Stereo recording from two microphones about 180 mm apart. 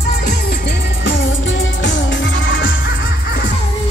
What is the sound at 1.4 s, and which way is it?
Music, 90° left.